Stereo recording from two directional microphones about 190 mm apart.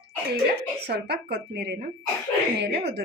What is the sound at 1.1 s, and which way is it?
Speech, 55° right (ahead or behind).